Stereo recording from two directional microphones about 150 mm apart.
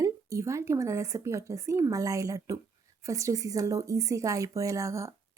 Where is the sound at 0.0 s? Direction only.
20° right (ahead or behind).